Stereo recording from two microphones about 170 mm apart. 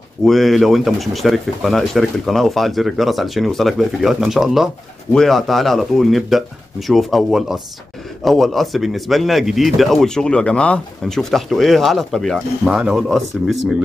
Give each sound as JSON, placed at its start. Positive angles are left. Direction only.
{"t": 0.2, "sound": "speech", "side_deg": 0}